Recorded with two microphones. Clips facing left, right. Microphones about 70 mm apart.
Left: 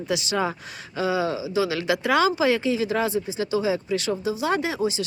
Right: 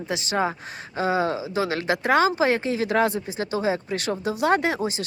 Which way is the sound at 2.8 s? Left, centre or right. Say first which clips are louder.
Right 2 dB; right.